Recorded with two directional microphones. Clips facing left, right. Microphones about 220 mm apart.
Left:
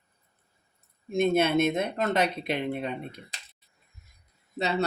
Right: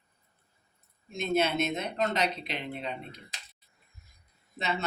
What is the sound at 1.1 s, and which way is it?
Speech, 55° left (ahead or behind).